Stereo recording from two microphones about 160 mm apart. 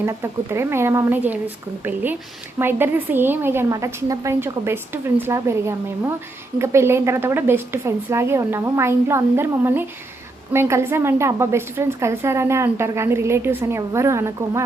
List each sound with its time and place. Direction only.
0.0 s a woman's voice: 15° right (ahead or behind)
2.6 s a woman's voice: 15° right (ahead or behind)